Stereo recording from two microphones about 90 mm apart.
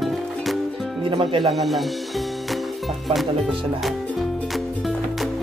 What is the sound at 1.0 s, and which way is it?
Speech, 80° right.